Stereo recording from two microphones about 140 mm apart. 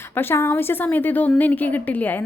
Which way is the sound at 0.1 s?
15° left (ahead or behind).